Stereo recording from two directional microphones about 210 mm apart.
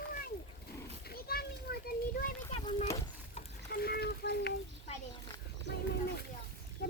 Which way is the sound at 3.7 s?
50° left (ahead or behind).